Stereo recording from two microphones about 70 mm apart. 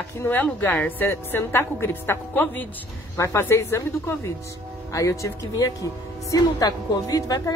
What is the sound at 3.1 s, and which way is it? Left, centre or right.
Speech, left.